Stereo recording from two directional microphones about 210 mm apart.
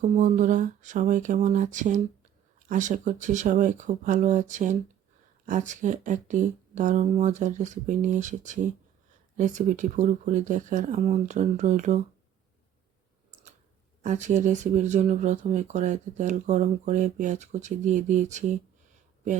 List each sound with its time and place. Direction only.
0.0 s speech: 35° right (ahead or behind)
14.0 s speech: 35° right (ahead or behind)